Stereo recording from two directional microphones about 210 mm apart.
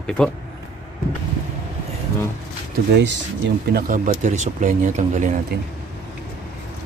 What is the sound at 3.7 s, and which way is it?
Speech, 40° right (ahead or behind).